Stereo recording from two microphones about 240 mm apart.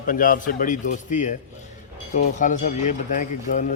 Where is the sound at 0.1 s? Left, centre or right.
Left.